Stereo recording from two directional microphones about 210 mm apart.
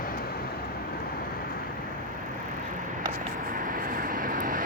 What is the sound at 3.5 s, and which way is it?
Vehicle, 40° right (ahead or behind).